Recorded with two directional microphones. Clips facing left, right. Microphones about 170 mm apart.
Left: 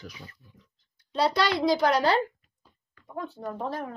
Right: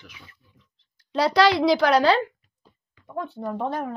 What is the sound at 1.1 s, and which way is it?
Speech, 90° right.